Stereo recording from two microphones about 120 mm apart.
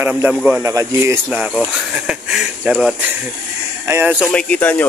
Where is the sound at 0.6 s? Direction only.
25° right (ahead or behind).